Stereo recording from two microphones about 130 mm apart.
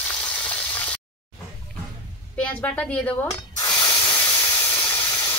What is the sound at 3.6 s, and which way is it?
Spray, 25° left (ahead or behind).